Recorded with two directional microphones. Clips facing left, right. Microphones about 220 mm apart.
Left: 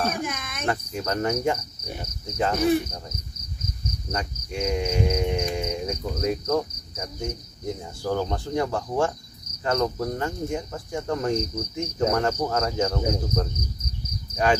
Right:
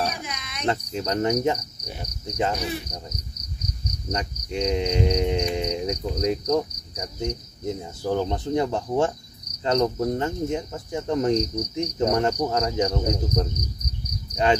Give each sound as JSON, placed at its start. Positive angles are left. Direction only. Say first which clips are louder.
{"t": 0.1, "sound": "cricket", "louder": "left 5 dB", "side_deg": 50}
{"t": 0.7, "sound": "speech", "louder": "right 2 dB", "side_deg": -20}
{"t": 2.2, "sound": "cricket", "louder": "even", "side_deg": -20}
{"t": 4.1, "sound": "speech", "louder": "right 3 dB", "side_deg": -20}
{"t": 14.3, "sound": "cricket", "louder": "right 1 dB", "side_deg": -20}